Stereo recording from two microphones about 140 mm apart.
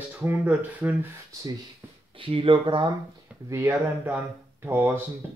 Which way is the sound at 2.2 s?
40° right (ahead or behind).